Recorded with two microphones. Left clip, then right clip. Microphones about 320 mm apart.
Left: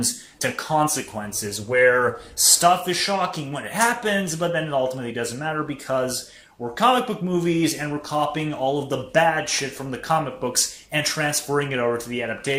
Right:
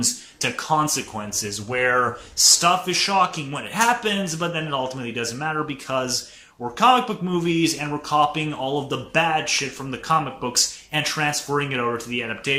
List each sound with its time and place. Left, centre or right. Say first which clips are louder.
0.3 s speech: even; centre